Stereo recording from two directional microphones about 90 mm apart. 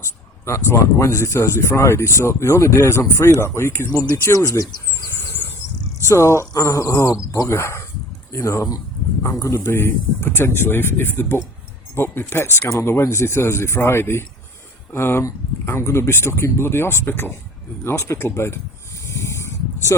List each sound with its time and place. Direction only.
0.0 s speech: 30° left (ahead or behind)
5.1 s a sound: 25° left (ahead or behind)
6.1 s speech: 30° left (ahead or behind)
19.0 s snake: 35° left (ahead or behind)